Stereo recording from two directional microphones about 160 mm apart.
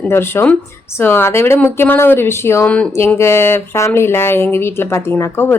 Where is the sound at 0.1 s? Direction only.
15° left (ahead or behind).